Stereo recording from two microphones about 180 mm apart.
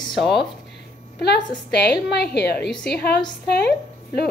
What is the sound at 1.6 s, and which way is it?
A woman's voice, 65° left (ahead or behind).